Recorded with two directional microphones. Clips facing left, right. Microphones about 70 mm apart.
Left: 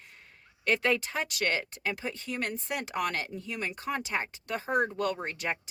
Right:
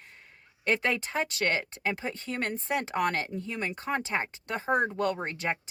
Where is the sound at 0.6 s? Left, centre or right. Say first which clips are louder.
Left 1 dB; right.